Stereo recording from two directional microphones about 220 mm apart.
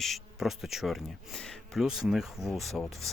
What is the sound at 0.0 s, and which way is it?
Speech, centre (ahead or behind).